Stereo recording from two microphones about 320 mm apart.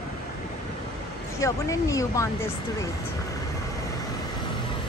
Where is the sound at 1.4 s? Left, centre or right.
Centre.